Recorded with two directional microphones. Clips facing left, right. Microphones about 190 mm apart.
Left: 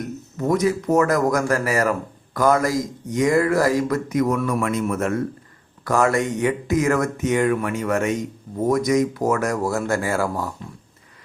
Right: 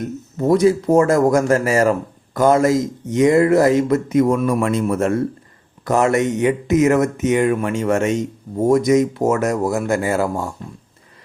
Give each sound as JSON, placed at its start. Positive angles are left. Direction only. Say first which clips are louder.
{"t": 0.0, "sound": "speech", "louder": "right 5 dB", "side_deg": -30}